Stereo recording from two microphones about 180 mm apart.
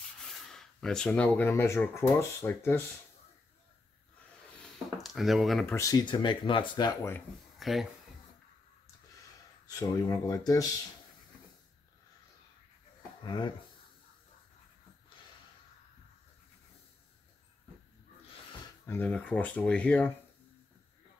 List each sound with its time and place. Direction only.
0.2 s speech: centre (ahead or behind)
4.9 s speech: centre (ahead or behind)
5.7 s speech: 20° left (ahead or behind)
7.5 s a sound: centre (ahead or behind)
9.7 s speech: 20° left (ahead or behind)
13.2 s speech: 25° left (ahead or behind)
18.9 s speech: 10° left (ahead or behind)